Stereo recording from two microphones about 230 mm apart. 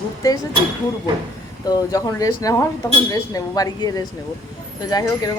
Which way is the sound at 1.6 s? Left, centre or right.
Centre.